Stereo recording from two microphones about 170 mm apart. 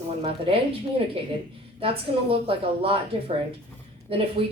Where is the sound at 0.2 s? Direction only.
30° right (ahead or behind).